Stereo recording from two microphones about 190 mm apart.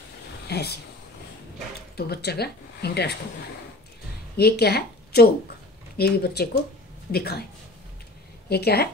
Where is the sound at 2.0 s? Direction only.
55° left (ahead or behind).